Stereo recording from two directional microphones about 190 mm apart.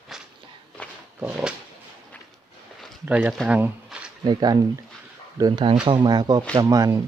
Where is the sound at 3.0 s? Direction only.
5° right (ahead or behind).